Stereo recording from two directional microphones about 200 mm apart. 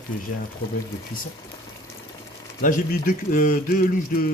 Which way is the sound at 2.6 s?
40° left (ahead or behind).